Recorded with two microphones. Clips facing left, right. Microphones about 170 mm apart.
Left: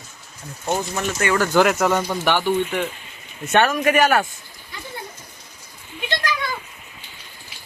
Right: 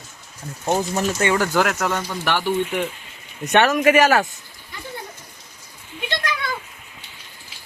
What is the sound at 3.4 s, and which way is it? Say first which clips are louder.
Speech: right 2 dB; 20° right (ahead or behind).